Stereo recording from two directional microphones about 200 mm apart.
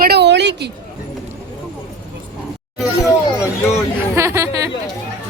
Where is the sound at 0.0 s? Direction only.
55° right (ahead or behind).